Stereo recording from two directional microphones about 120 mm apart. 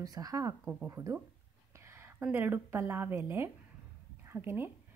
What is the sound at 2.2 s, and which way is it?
Speech, 15° right (ahead or behind).